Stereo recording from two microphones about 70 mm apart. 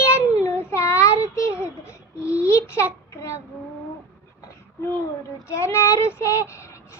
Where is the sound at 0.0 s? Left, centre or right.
Left.